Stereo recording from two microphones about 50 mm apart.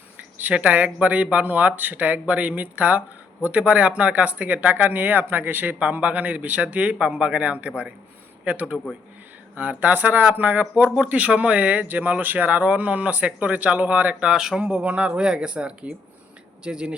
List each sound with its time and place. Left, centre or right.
0.5 s speech: right
10.8 s speech: centre
11.1 s speech: right
14.3 s speech: centre
14.6 s speech: right